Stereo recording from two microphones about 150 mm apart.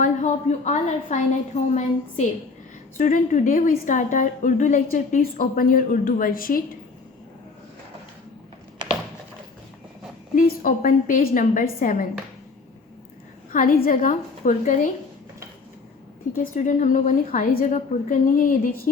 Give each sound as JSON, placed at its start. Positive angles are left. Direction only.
{"t": 0.0, "sound": "a woman's voice", "side_deg": 50}
{"t": 10.3, "sound": "a woman's voice", "side_deg": 65}
{"t": 13.5, "sound": "a woman's voice", "side_deg": 65}
{"t": 16.4, "sound": "a woman's voice", "side_deg": 60}